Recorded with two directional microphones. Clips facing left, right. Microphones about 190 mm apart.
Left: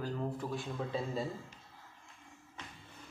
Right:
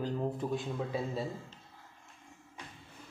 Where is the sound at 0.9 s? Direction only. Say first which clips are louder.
Left 1 dB; 5° right (ahead or behind).